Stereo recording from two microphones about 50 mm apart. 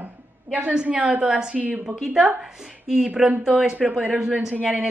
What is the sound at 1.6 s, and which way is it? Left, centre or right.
Speech, right.